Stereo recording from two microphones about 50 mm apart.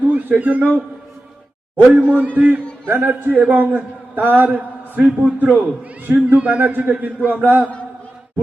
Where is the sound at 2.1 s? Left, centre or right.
Right.